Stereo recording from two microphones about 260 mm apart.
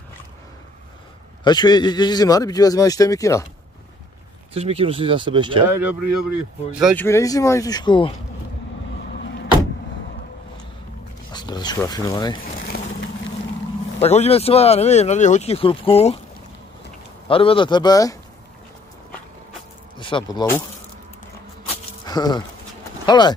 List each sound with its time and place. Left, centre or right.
1.4 s a man's voice: centre
4.6 s speech: right
6.7 s speech: centre
7.1 s a man's voice: centre
9.1 s a sound: left
11.3 s speech: centre
13.9 s speech: left
17.3 s a man's voice: left
20.0 s a man's voice: centre
22.0 s speech: centre